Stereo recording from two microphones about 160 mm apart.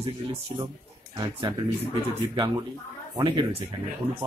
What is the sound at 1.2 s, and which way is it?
Speech, 35° right (ahead or behind).